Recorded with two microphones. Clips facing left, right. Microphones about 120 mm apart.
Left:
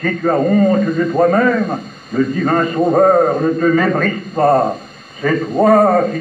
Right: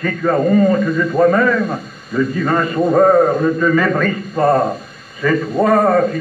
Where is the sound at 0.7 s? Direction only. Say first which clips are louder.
Left 1 dB; 45° left (ahead or behind).